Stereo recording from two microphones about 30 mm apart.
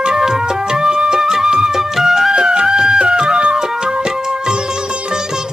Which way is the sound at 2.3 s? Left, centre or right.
Right.